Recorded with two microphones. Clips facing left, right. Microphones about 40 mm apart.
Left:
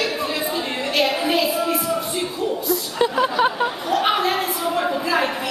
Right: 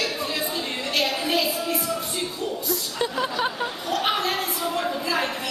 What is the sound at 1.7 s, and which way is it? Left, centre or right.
Music, centre.